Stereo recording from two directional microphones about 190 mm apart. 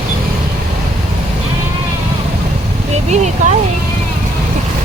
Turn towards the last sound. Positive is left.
turn(degrees=-40)  # may be behind; listen again after turning